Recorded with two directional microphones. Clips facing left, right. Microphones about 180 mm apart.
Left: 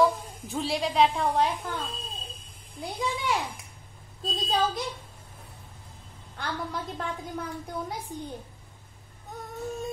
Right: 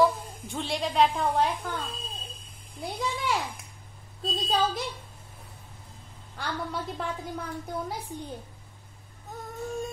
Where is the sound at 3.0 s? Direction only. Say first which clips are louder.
Left 1 dB; centre (ahead or behind).